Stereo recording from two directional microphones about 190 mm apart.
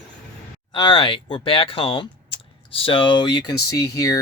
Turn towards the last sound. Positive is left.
turn(degrees=15)  # may be behind; listen again after turning